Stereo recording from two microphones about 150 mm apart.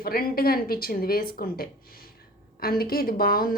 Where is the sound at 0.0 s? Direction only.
80° left.